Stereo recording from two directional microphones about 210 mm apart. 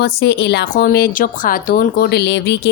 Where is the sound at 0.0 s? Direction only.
50° left (ahead or behind).